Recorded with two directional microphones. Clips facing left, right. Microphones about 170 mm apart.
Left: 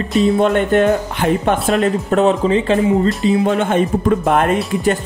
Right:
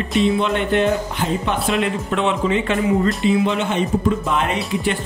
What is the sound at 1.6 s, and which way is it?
Speech, 45° left (ahead or behind).